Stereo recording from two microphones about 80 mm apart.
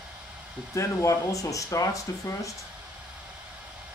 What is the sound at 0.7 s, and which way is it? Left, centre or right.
Speech, left.